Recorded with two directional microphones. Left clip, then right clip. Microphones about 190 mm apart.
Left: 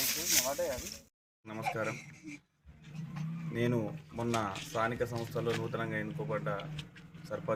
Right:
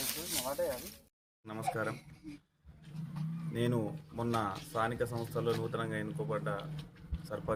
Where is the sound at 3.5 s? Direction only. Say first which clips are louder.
Left 1 dB; 10° right (ahead or behind).